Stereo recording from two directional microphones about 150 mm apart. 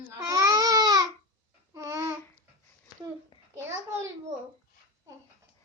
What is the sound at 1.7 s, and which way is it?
Babbling, 20° right (ahead or behind).